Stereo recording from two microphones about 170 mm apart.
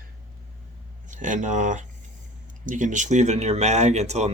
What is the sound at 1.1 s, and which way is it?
Speech, 50° right (ahead or behind).